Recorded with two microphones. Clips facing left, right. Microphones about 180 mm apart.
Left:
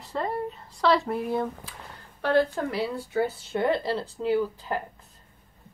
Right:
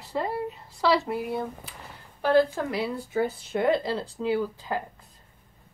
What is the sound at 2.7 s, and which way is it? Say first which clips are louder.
Speech: even; 15° right (ahead or behind).